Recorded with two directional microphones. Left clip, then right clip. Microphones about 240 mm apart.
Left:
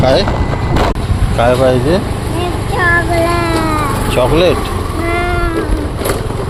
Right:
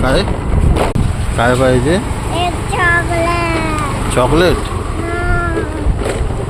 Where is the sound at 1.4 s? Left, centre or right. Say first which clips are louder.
Left 2 dB; right.